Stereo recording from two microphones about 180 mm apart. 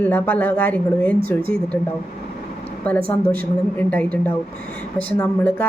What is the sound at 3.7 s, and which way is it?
Speech, 10° left (ahead or behind).